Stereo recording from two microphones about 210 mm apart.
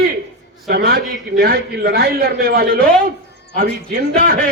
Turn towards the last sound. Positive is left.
turn(degrees=-40)  # may be behind; listen again after turning